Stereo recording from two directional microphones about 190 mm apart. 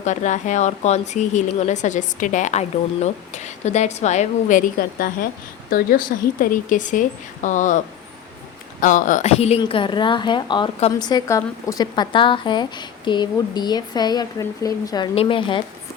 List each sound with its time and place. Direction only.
0.0 s a woman's voice: 40° left (ahead or behind)
8.8 s a woman's voice: 40° left (ahead or behind); by 15.6 s 25° left (ahead or behind)